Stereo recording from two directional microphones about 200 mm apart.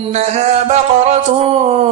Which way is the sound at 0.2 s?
35° right (ahead or behind).